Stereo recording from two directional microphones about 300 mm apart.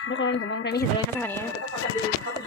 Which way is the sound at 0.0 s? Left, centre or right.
Left.